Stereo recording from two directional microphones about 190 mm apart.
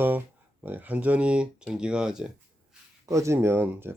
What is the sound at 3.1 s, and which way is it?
Speech, 15° right (ahead or behind).